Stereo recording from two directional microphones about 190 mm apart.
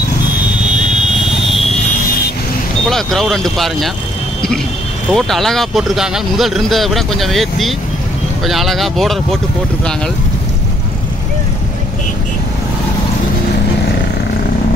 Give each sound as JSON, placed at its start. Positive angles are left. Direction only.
{"t": 2.9, "sound": "speech", "side_deg": 0}
{"t": 5.1, "sound": "speech", "side_deg": 0}